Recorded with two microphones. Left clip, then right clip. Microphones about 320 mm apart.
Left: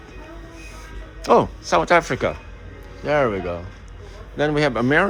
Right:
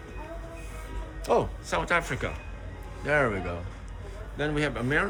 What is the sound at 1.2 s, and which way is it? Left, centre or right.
Speech, left.